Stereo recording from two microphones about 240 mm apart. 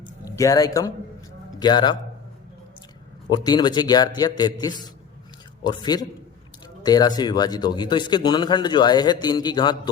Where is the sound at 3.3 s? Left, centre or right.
Centre.